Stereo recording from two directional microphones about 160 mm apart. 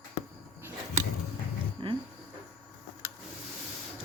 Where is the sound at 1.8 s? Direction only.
30° right (ahead or behind).